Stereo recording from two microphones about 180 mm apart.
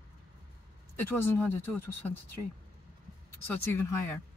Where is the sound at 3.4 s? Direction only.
10° left (ahead or behind).